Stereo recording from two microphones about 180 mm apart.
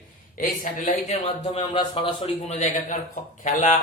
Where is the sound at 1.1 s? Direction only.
30° left (ahead or behind).